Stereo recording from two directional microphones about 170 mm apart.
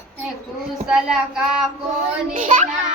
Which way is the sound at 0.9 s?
5° right (ahead or behind).